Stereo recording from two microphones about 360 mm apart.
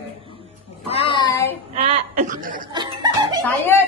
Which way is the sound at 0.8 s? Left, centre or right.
Centre.